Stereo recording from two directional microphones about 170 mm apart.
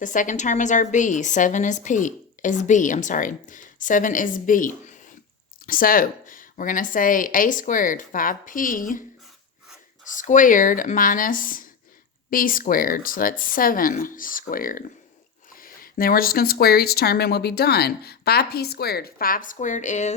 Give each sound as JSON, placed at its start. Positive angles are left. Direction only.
{"t": 0.0, "sound": "a woman's voice", "side_deg": 50}
{"t": 10.2, "sound": "a woman's voice", "side_deg": 50}